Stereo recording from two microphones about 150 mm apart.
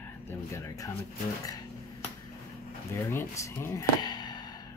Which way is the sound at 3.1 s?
20° left (ahead or behind).